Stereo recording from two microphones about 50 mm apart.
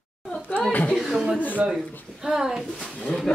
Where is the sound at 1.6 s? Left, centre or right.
Centre.